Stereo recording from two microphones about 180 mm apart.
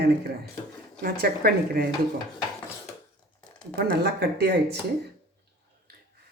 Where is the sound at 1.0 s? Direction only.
55° right (ahead or behind).